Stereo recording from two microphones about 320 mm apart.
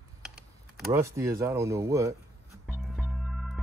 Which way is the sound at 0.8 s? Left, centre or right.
Centre.